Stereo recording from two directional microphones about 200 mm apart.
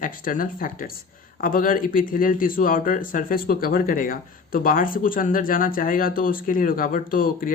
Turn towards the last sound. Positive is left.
turn(degrees=45)  # may be behind; listen again after turning